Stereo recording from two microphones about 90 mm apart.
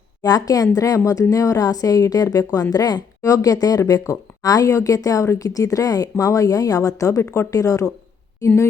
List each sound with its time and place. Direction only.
0.2 s a woman's voice: 45° left (ahead or behind)